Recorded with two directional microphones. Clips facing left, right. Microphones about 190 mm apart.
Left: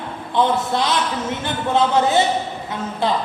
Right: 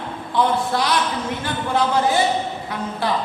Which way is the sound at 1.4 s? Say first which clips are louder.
Left 3 dB; 25° left (ahead or behind).